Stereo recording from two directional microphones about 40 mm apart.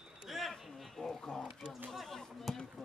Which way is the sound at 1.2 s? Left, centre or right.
Left.